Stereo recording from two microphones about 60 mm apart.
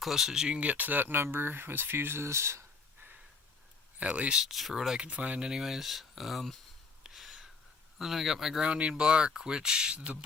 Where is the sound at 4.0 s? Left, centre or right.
Right.